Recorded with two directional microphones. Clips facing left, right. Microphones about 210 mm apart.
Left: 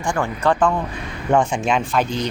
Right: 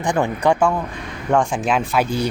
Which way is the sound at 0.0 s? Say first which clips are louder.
Right 2 dB; 20° right (ahead or behind).